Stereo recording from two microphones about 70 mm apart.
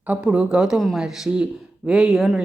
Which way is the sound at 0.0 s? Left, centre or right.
Right.